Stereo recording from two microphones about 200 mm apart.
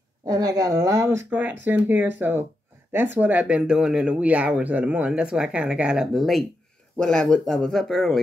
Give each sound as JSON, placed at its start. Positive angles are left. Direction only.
{"t": 0.3, "sound": "speech", "side_deg": -20}